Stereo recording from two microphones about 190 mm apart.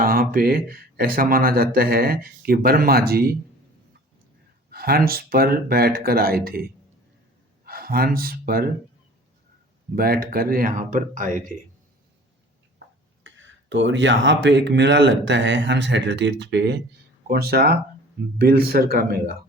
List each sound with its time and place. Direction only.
0.0 s speech: 50° right (ahead or behind)
4.7 s a man's voice: 55° right (ahead or behind)
9.9 s speech: 50° right (ahead or behind)
13.2 s speech: 85° right; by 19.2 s 55° right (ahead or behind)